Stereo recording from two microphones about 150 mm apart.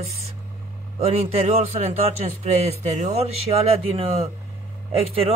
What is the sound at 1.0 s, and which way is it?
Speech, 45° right (ahead or behind).